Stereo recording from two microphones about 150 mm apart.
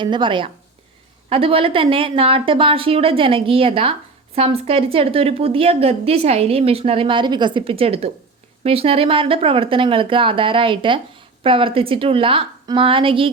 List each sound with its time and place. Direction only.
0.0 s a woman's voice: 30° right (ahead or behind)